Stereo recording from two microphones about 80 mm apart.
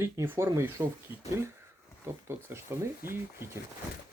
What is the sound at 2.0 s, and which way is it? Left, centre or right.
Speech, right.